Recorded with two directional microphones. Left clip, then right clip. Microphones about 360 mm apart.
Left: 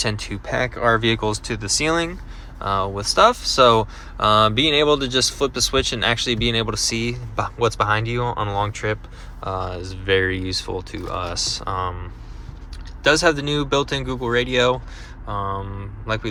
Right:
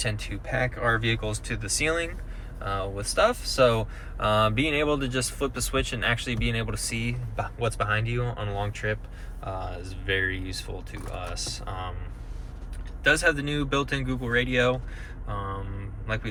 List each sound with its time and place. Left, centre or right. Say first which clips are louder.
0.0 s speech: left 7 dB; centre
13.0 s speech: left 6 dB; centre